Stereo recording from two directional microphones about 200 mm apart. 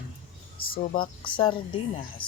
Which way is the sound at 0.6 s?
45° left (ahead or behind).